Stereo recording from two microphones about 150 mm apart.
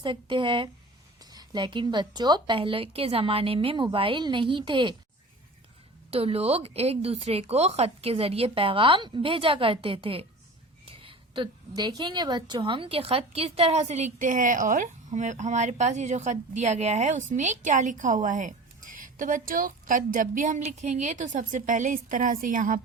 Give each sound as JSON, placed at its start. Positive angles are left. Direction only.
{"t": 0.0, "sound": "speech", "side_deg": -35}
{"t": 6.1, "sound": "speech", "side_deg": -40}
{"t": 10.8, "sound": "a sound", "side_deg": -35}
{"t": 11.7, "sound": "a woman's voice", "side_deg": -30}